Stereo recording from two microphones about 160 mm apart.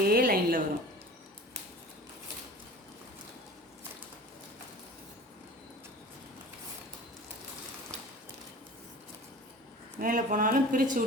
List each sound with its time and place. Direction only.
0.0 s a woman's voice: 65° right (ahead or behind)
10.0 s speech: 60° right (ahead or behind)